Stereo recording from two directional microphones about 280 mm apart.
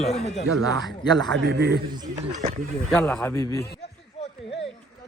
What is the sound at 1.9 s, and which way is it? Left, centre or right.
Speech, centre.